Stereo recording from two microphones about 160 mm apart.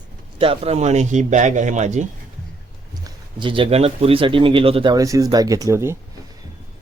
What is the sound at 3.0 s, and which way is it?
Speech, 30° right (ahead or behind).